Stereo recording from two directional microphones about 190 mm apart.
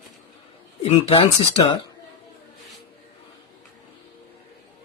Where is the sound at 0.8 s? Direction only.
35° left (ahead or behind).